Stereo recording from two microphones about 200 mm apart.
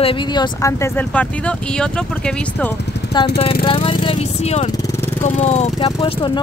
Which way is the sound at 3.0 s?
60° left (ahead or behind).